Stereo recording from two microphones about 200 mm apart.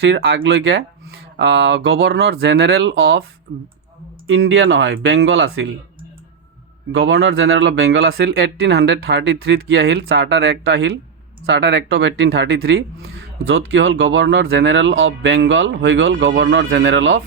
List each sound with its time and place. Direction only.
0.1 s speech: 55° right (ahead or behind)
4.3 s speech: 80° right
6.9 s speech: 65° right (ahead or behind)
8.2 s speech: 50° right (ahead or behind)
11.4 s speech: 70° right (ahead or behind); by 12.8 s 50° right (ahead or behind)
13.5 s speech: 90° right
13.8 s speech: 55° right (ahead or behind)